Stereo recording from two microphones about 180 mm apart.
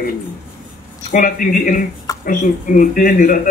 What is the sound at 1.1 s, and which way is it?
Speech, 50° left (ahead or behind).